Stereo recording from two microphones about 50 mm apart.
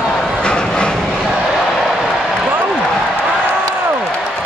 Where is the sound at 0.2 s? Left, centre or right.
Centre.